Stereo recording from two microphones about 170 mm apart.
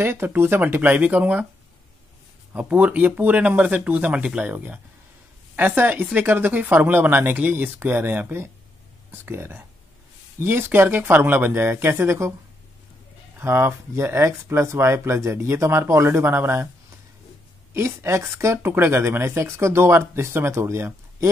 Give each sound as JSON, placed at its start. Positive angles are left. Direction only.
{"t": 0.0, "sound": "speech", "side_deg": -15}
{"t": 2.5, "sound": "speech", "side_deg": -10}
{"t": 13.4, "sound": "speech", "side_deg": -15}
{"t": 17.7, "sound": "speech", "side_deg": -15}